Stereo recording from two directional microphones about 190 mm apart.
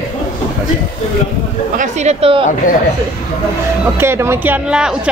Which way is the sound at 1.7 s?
35° right (ahead or behind).